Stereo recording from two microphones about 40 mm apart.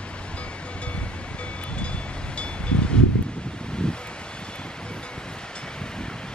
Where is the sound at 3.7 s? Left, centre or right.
Left.